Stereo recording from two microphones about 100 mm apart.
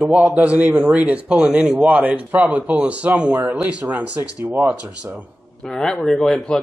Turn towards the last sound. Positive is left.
turn(degrees=10)  # may be behind; listen again after turning